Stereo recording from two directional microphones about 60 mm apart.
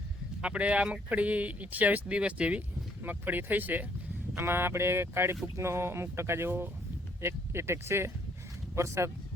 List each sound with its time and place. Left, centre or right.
0.4 s speech: centre
3.0 s speech: right
4.4 s speech: right